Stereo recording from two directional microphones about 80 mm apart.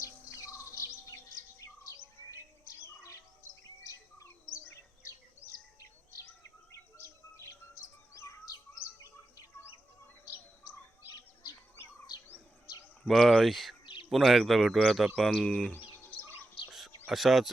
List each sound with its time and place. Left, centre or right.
0.0 s insect: left
5.4 s a sound: centre
6.2 s bird vocalization: left
13.1 s speech: centre
13.8 s bird: left
14.1 s speech: centre
15.7 s bird: centre
17.1 s speech: centre